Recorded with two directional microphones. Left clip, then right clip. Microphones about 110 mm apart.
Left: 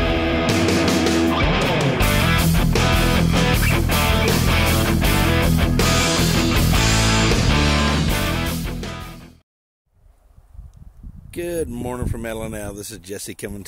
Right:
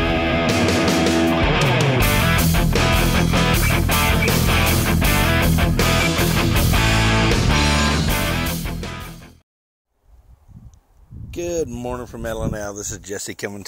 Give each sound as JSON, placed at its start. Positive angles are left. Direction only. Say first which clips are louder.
{"t": 0.0, "sound": "music", "louder": "right 1 dB", "side_deg": 0}
{"t": 11.2, "sound": "a sound", "louder": "right 1 dB", "side_deg": 10}
{"t": 11.7, "sound": "speech", "louder": "right 1 dB", "side_deg": 30}
{"t": 12.0, "sound": "speech", "louder": "right 1 dB", "side_deg": 40}